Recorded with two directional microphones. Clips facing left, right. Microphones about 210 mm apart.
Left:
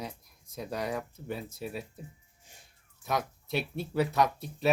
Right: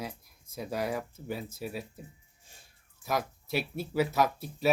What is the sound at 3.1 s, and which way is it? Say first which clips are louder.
Speech: even; centre (ahead or behind).